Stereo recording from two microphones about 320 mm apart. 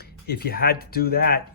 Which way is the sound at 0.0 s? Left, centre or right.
Left.